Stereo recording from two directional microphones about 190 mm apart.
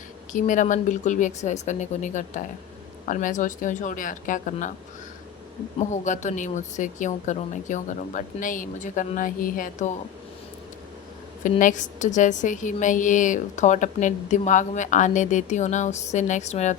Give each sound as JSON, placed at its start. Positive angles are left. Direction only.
{"t": 0.3, "sound": "a woman's voice", "side_deg": 40}
{"t": 5.9, "sound": "a woman's voice", "side_deg": 40}
{"t": 11.4, "sound": "a woman's voice", "side_deg": 40}